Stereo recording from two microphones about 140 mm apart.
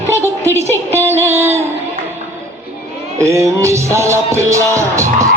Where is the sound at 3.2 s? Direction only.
20° right (ahead or behind).